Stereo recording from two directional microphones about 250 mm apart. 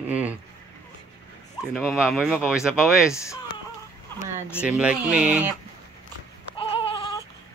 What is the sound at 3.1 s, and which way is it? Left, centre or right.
Speech, centre.